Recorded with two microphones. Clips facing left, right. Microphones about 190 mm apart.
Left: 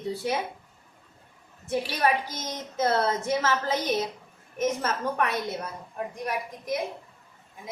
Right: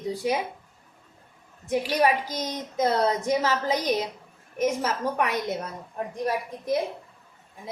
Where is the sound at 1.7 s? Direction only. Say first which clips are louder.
Right 3 dB; 15° right (ahead or behind).